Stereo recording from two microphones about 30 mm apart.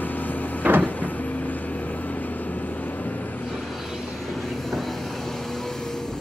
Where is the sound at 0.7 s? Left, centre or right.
Right.